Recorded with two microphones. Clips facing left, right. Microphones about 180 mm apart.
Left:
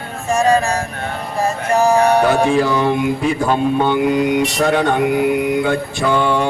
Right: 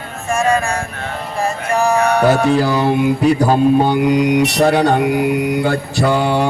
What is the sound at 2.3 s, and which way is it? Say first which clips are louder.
Speech: right 1 dB; 35° right (ahead or behind).